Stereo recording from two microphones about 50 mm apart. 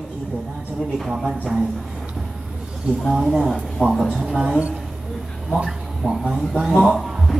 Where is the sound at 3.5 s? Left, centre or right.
Centre.